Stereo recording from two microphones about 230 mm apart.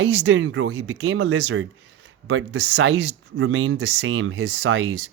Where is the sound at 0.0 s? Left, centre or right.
Right.